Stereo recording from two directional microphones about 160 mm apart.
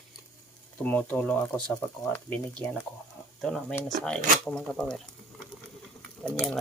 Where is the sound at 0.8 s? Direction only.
10° left (ahead or behind).